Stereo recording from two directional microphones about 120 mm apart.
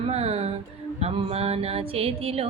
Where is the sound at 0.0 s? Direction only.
60° right (ahead or behind).